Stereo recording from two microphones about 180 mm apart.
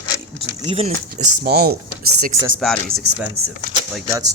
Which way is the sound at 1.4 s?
55° right (ahead or behind).